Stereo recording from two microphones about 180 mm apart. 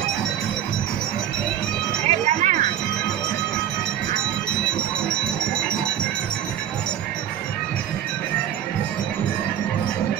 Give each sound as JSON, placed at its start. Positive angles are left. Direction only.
{"t": 2.0, "sound": "music", "side_deg": -40}